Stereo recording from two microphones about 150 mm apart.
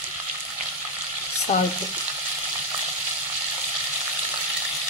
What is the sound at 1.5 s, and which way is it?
Frying, 60° left (ahead or behind).